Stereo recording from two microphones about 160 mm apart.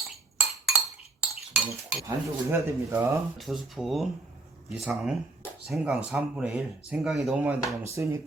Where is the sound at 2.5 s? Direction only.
15° right (ahead or behind).